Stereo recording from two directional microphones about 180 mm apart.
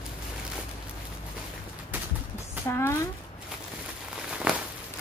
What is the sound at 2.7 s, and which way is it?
Speech, 15° left (ahead or behind).